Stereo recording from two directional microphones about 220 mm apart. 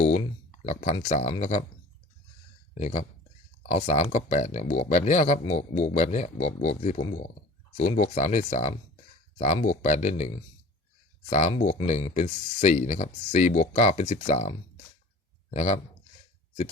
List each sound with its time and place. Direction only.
0.6 s speech: 30° left (ahead or behind)
2.7 s a man's voice: 30° left (ahead or behind)